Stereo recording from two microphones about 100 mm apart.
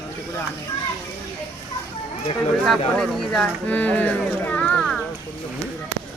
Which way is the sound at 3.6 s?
15° left (ahead or behind).